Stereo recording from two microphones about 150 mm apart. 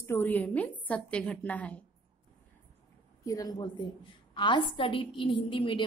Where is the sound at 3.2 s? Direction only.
25° left (ahead or behind).